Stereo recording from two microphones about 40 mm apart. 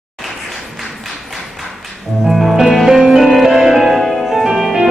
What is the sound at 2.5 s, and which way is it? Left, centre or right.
Music, centre.